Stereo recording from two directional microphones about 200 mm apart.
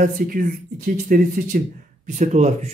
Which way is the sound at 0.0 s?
45° right (ahead or behind).